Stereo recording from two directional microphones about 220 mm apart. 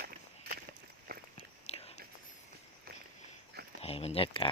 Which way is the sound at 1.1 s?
45° right (ahead or behind).